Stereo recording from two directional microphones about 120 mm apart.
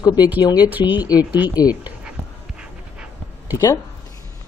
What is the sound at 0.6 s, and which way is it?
Speech, 15° right (ahead or behind).